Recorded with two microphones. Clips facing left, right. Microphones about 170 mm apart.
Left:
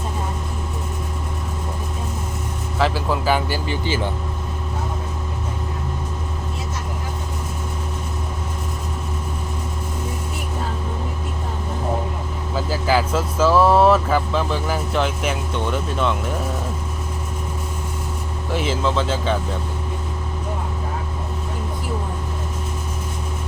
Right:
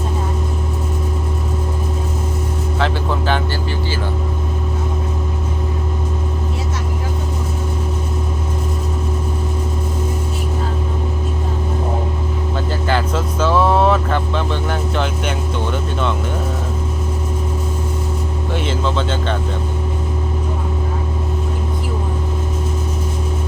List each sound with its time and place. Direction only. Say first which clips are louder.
2.7 s vehicle: left 1 dB; 5° left (ahead or behind)
3.7 s vehicle: even; 20° left (ahead or behind)
12.5 s vehicle: left 1 dB; 5° left (ahead or behind)
18.5 s a sound: even; centre (ahead or behind)